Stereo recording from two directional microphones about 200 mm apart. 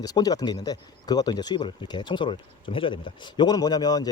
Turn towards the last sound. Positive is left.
turn(degrees=20)  # may be behind; listen again after turning